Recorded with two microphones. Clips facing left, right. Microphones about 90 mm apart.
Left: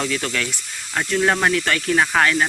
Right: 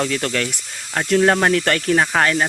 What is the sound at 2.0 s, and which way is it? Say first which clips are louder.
Speech: even; 30° right (ahead or behind).